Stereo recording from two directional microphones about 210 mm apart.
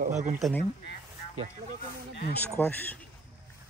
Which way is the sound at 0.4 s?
5° left (ahead or behind).